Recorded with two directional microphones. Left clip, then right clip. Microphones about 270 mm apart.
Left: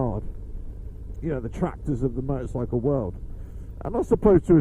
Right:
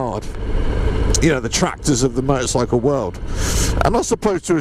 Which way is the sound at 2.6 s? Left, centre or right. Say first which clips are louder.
Right 4 dB; centre.